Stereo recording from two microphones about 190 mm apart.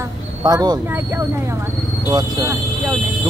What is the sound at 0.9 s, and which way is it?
Speech, 10° right (ahead or behind).